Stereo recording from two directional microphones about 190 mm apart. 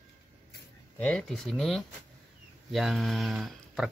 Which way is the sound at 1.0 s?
5° left (ahead or behind).